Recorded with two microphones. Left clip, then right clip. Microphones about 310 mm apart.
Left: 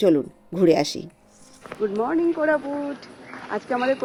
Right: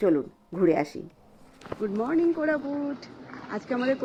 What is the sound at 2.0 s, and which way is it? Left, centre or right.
Speech, left.